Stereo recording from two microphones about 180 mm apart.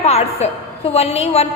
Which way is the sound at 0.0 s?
35° left (ahead or behind).